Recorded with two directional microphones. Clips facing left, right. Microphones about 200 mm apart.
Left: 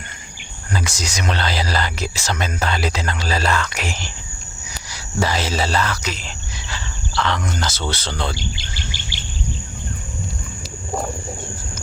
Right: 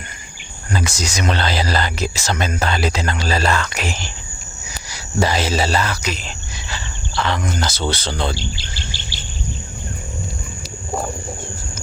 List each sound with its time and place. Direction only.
0.7 s speech: 25° right (ahead or behind)
4.9 s speech: 15° right (ahead or behind)
8.3 s speech: 30° right (ahead or behind)
8.7 s insect: 15° left (ahead or behind)